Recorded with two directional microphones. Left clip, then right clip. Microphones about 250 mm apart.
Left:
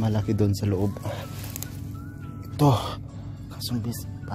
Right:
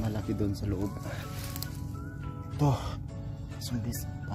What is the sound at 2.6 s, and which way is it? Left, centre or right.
Speech, left.